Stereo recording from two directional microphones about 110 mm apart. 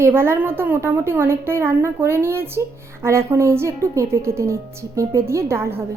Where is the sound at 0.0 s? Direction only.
20° right (ahead or behind).